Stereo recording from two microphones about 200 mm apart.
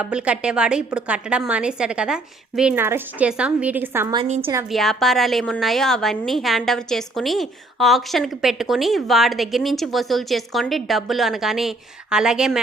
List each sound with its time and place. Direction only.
0.0 s a woman's voice: 5° right (ahead or behind)
4.2 s a woman's voice: 30° right (ahead or behind)
4.7 s a woman's voice: centre (ahead or behind)